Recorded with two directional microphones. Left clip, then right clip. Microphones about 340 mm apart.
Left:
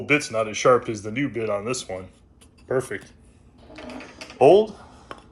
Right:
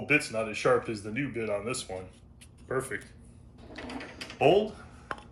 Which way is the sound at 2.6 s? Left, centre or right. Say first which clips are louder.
Left 7 dB; centre.